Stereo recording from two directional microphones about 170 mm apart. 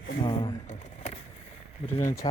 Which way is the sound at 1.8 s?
15° left (ahead or behind).